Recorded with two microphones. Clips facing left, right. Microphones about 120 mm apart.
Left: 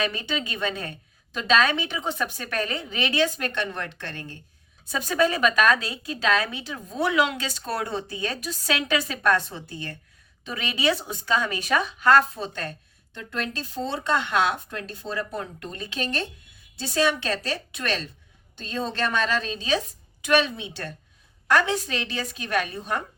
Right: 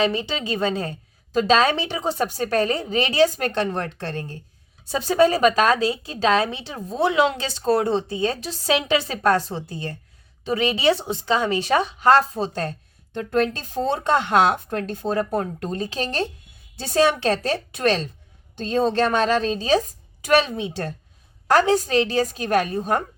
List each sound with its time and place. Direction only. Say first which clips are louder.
0.0 s a woman's voice: right 5 dB; 25° right (ahead or behind); by 23.0 s 40° right (ahead or behind)